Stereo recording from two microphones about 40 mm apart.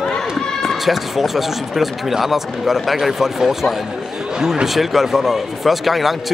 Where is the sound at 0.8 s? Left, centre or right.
Centre.